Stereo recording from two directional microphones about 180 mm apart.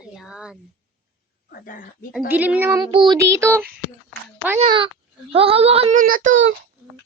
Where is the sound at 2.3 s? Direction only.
10° right (ahead or behind).